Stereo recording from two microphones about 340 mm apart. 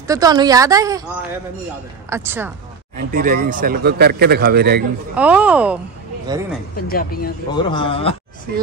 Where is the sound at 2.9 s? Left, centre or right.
Right.